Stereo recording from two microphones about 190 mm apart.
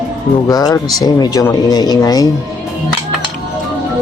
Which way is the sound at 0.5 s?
20° left (ahead or behind).